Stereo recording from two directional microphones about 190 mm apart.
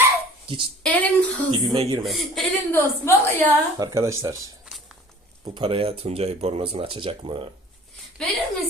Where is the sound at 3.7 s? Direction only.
15° right (ahead or behind).